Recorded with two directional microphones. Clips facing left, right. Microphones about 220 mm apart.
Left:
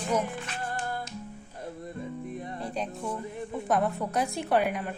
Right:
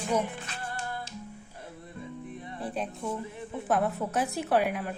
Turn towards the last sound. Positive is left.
turn(degrees=0)  # may be behind; listen again after turning